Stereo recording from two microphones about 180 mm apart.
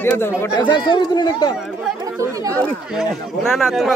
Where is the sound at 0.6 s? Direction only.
25° left (ahead or behind).